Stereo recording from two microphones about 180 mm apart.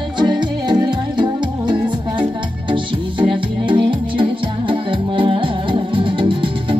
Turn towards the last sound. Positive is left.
turn(degrees=-30)  # may be behind; listen again after turning